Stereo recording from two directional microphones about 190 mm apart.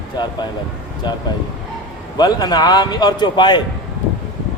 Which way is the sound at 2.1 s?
20° left (ahead or behind).